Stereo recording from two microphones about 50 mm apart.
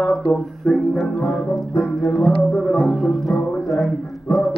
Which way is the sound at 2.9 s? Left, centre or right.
Centre.